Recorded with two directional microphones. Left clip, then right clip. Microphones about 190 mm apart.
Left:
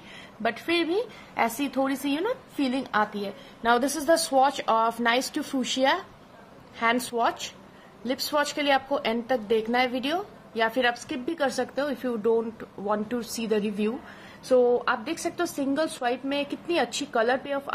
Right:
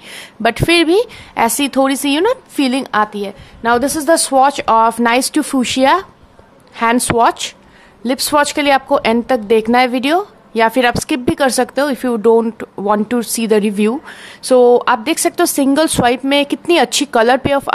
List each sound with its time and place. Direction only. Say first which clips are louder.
0.4 s a woman's voice: right 14 dB; 50° right (ahead or behind)